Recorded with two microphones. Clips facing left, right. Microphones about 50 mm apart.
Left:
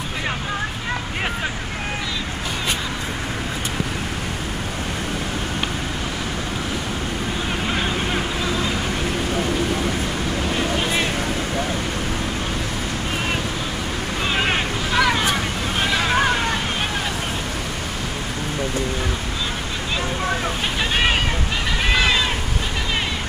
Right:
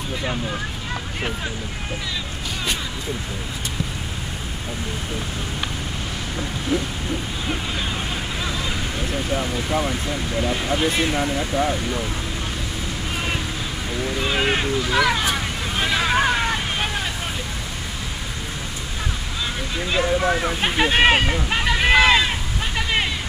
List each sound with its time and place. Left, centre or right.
14.2 s speech: centre
15.8 s hubbub: centre
20.6 s speech: right
21.8 s boat: centre